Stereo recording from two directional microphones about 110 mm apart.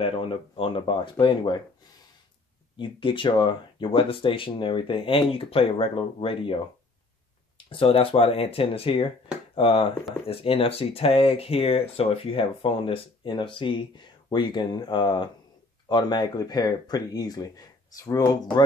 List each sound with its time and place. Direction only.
0.0 s speech: 55° left (ahead or behind)
2.8 s speech: 50° left (ahead or behind)